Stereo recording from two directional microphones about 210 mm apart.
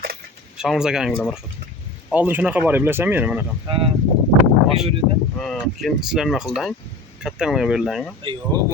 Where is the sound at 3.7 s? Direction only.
25° right (ahead or behind).